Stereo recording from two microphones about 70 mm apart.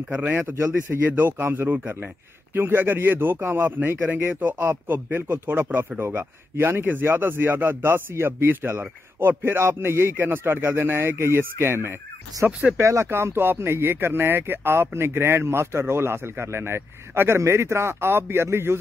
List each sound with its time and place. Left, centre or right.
0.1 s speech: right
12.4 s speech: right
12.7 s speech: right